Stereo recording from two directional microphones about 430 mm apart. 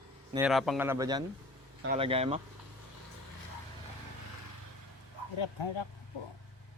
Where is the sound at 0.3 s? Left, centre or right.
Centre.